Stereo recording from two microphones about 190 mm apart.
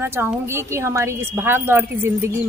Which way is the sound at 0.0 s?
10° right (ahead or behind).